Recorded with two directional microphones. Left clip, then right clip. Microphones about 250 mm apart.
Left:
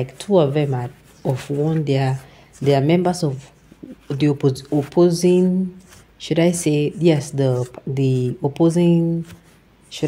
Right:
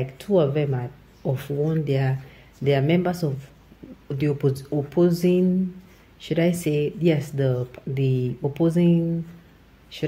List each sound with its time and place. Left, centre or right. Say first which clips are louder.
0.0 s speech: left 4 dB; left